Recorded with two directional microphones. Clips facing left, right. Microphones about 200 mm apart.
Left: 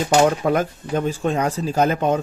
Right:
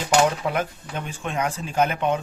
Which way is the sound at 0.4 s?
45° left (ahead or behind).